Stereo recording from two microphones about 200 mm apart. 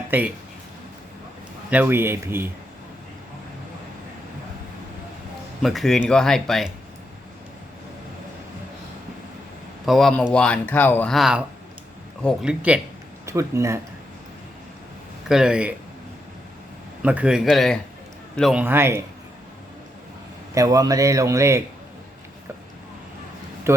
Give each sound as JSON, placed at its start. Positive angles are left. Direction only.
{"t": 0.1, "sound": "a man's voice", "side_deg": -10}
{"t": 1.7, "sound": "a man's voice", "side_deg": -10}
{"t": 5.6, "sound": "speech", "side_deg": 0}
{"t": 9.8, "sound": "speech", "side_deg": 0}
{"t": 15.3, "sound": "speech", "side_deg": -5}
{"t": 17.0, "sound": "speech", "side_deg": -5}
{"t": 18.6, "sound": "a man's voice", "side_deg": -10}
{"t": 20.5, "sound": "a man's voice", "side_deg": -15}
{"t": 23.7, "sound": "speech", "side_deg": -15}